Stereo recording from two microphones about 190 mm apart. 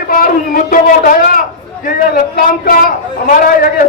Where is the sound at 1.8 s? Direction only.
50° left (ahead or behind).